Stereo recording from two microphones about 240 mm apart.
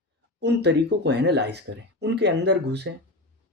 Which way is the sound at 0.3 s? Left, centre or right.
Right.